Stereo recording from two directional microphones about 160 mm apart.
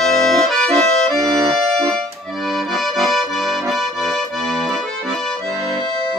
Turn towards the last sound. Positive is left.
turn(degrees=0)  # may be behind; listen again after turning